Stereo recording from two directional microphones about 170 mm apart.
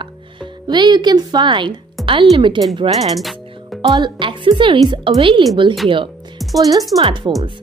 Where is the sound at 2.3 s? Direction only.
30° right (ahead or behind).